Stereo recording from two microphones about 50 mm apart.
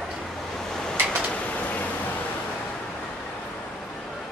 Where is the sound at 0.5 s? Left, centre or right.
Centre.